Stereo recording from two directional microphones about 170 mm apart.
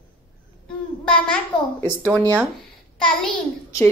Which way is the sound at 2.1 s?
20° right (ahead or behind).